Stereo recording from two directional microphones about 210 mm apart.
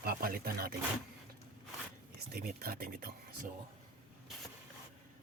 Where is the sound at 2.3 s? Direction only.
45° right (ahead or behind).